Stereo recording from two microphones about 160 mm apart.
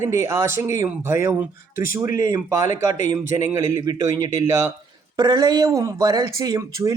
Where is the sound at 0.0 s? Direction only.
15° right (ahead or behind).